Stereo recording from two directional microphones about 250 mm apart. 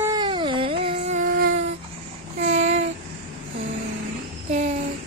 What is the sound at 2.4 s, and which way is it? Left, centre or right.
Child singing, right.